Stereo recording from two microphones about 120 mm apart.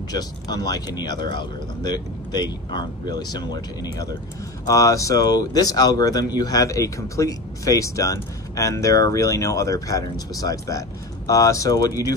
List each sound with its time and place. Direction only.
0.1 s speech: 35° left (ahead or behind)